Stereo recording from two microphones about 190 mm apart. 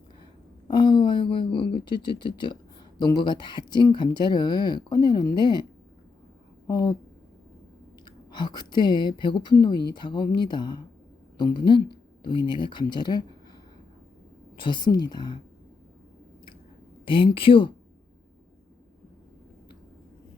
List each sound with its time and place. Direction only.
0.7 s speech: 25° left (ahead or behind)
6.7 s speech: 20° left (ahead or behind)
8.0 s speech: 25° left (ahead or behind)
14.5 s speech: 25° left (ahead or behind)
17.1 s speech: 25° left (ahead or behind)